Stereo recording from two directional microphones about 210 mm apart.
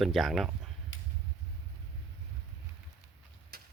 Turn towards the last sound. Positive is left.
turn(degrees=-45)  # may be behind; listen again after turning